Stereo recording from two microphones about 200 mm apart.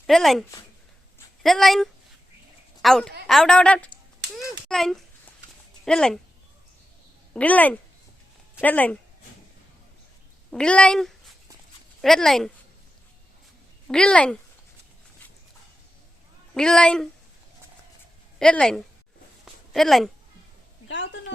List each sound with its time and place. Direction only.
0.1 s a woman's voice: centre (ahead or behind)
7.3 s speech: 10° left (ahead or behind)
10.5 s a woman's voice: 5° left (ahead or behind)
13.8 s a woman's voice: 5° left (ahead or behind)
16.6 s a woman's voice: 5° left (ahead or behind)
18.3 s a woman's voice: 5° left (ahead or behind)
20.8 s a sound: 65° left (ahead or behind)